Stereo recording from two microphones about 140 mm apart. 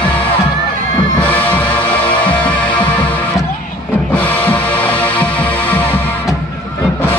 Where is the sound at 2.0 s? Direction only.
35° left (ahead or behind).